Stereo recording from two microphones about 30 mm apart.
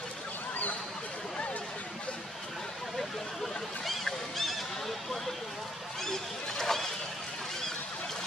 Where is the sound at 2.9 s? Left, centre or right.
Centre.